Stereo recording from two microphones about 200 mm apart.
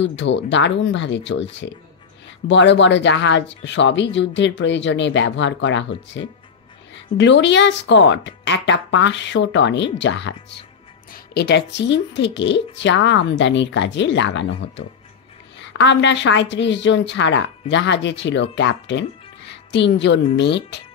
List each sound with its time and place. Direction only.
0.0 s speech: 65° left (ahead or behind)
11.1 s speech: 50° left (ahead or behind)